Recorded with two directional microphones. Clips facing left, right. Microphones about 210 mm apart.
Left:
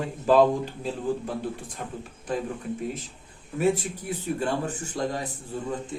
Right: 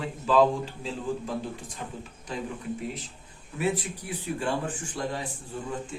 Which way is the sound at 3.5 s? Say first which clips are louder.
Left 4 dB; 45° left (ahead or behind).